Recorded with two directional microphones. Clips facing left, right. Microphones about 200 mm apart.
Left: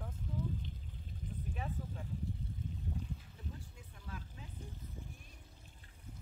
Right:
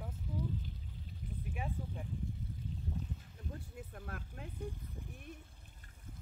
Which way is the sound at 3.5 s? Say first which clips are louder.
Right 6 dB; 55° right (ahead or behind).